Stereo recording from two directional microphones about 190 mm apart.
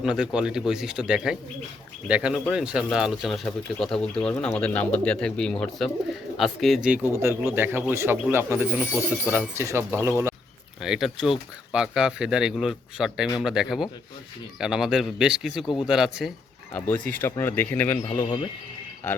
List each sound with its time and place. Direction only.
0.0 s speech: 5° right (ahead or behind)
7.2 s speech: 15° right (ahead or behind)
10.8 s speech: centre (ahead or behind)
15.6 s speech: 25° left (ahead or behind)
15.9 s speech: centre (ahead or behind)
16.7 s speech: 10° left (ahead or behind)